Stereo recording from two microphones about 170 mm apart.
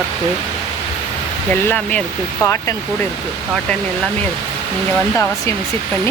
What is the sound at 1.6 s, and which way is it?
Speech, 10° left (ahead or behind).